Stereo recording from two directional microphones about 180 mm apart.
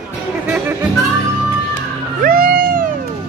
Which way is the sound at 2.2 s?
55° right (ahead or behind).